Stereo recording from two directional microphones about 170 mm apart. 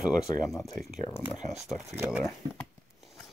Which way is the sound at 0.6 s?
Centre (ahead or behind).